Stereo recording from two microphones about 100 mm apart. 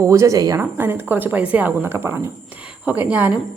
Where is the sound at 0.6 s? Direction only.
20° right (ahead or behind).